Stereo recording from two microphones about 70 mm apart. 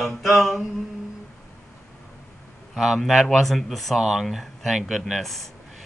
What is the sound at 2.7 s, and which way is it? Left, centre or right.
Speech, centre.